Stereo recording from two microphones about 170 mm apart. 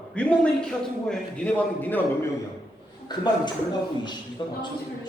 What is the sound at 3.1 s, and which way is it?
Speech, 25° left (ahead or behind).